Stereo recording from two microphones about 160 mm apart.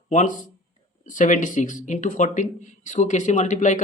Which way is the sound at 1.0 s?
55° left (ahead or behind).